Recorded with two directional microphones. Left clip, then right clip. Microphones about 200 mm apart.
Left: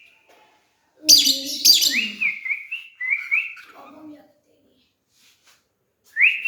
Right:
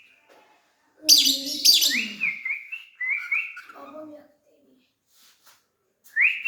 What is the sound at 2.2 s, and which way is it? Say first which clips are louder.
Whistling: left 3 dB; centre (ahead or behind).